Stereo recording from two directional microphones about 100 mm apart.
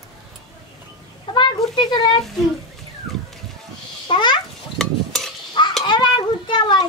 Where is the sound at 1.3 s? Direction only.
50° left (ahead or behind).